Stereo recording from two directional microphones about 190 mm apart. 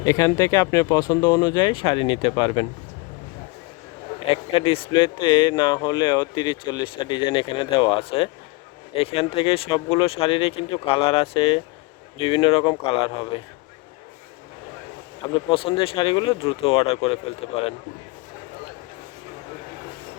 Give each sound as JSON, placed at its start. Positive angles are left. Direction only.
{"t": 0.0, "sound": "speech", "side_deg": 15}
{"t": 4.3, "sound": "speech", "side_deg": 30}
{"t": 15.4, "sound": "speech", "side_deg": 30}